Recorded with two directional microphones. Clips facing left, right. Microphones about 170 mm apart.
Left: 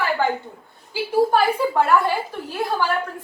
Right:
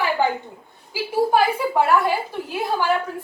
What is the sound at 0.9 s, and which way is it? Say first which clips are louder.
A woman's voice: left 1 dB; 10° right (ahead or behind).